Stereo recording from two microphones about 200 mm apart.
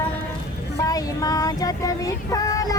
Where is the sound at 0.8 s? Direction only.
20° left (ahead or behind).